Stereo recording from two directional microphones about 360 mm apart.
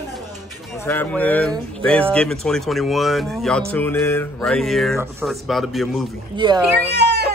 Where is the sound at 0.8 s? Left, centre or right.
Centre.